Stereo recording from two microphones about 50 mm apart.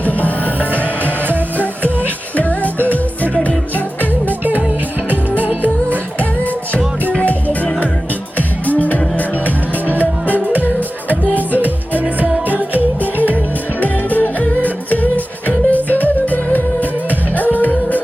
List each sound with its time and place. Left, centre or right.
0.0 s music: left
2.3 s music: left
4.3 s music: right
6.1 s music: left
10.2 s music: right
13.2 s music: left